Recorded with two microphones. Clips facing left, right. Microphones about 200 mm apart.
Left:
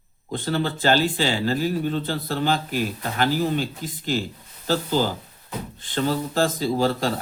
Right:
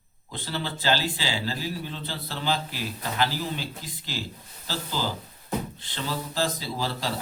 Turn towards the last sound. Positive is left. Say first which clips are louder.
# left 9 dB
turn(degrees=50)  # may be behind; listen again after turning